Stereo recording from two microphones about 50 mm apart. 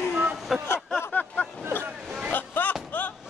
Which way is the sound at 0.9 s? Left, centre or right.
Left.